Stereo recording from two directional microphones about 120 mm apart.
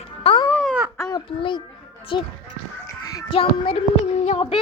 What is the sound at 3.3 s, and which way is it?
A child's voice, 50° left (ahead or behind).